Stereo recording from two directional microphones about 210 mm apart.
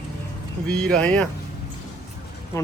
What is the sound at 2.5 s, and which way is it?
Speech, 15° left (ahead or behind).